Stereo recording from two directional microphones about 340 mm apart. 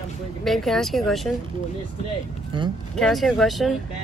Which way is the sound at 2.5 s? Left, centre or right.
Centre.